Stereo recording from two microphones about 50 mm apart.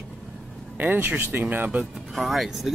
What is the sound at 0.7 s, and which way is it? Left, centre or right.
Speech, right.